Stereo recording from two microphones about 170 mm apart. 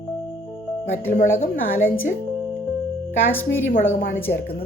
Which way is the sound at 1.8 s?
10° left (ahead or behind).